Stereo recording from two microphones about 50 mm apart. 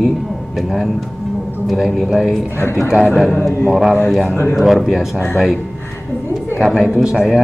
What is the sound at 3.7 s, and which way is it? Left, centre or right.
Speech, centre.